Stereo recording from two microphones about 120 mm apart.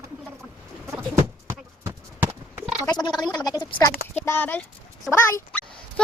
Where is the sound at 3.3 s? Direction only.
35° left (ahead or behind).